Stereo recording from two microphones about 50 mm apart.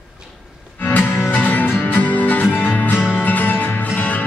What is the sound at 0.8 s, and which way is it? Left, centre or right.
Music, left.